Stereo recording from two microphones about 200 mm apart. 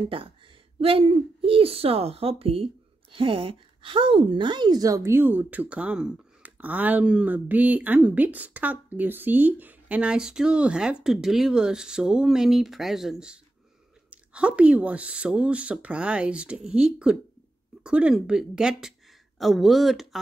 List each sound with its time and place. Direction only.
0.1 s speech: 25° right (ahead or behind); by 20.2 s centre (ahead or behind)